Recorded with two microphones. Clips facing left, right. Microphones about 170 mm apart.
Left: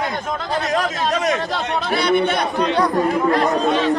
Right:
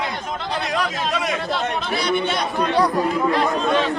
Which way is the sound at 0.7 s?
45° left (ahead or behind).